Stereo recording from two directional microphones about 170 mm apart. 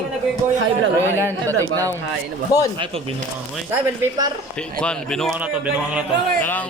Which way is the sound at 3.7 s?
20° right (ahead or behind).